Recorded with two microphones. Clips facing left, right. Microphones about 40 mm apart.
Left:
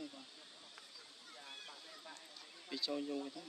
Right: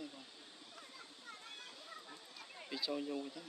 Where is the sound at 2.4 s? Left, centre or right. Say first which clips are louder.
Right 5 dB; right.